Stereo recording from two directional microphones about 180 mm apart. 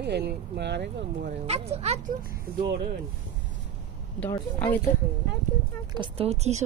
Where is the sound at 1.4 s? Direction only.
35° right (ahead or behind).